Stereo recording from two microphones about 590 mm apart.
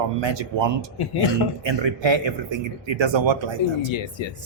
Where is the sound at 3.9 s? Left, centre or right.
Left.